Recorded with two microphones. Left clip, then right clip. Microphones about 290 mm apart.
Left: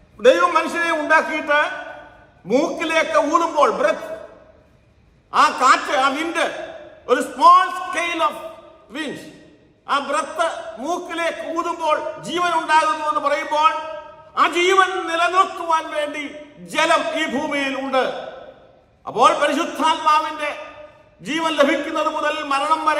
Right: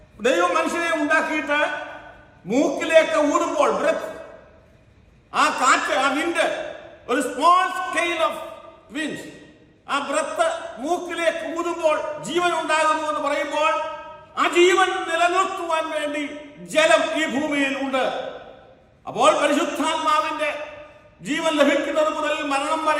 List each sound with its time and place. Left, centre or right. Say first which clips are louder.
0.2 s a man's voice: left 5 dB; centre
5.3 s a man's voice: left 4 dB; centre
19.0 s a man's voice: left 2 dB; centre